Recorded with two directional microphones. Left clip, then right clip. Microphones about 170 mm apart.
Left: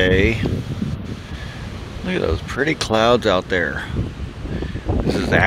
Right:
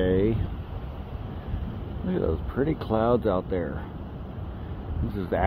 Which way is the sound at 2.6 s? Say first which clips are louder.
Left 7 dB; 20° left (ahead or behind).